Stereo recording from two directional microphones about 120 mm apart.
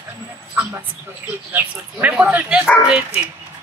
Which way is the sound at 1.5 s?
15° right (ahead or behind).